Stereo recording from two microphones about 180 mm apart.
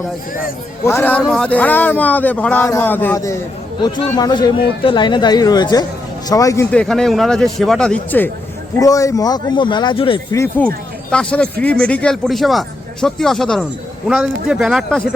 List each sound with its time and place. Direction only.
0.9 s speech: 10° left (ahead or behind)
6.7 s speech: 5° left (ahead or behind)
8.8 s speech: 20° left (ahead or behind)
10.3 s speech: 15° left (ahead or behind)